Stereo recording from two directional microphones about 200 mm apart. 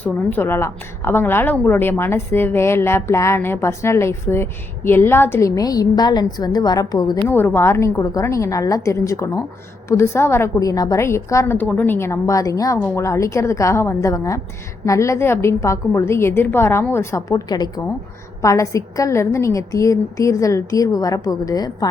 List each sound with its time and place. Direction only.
0.0 s a woman's voice: 10° left (ahead or behind)